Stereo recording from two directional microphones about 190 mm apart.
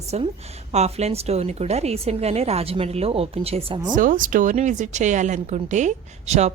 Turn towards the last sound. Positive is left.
turn(degrees=-35)  # may be behind; listen again after turning